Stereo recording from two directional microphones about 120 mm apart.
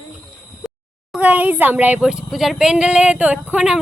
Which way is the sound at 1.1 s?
10° right (ahead or behind).